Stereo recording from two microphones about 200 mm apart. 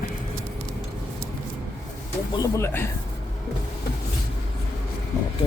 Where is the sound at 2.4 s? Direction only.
15° left (ahead or behind).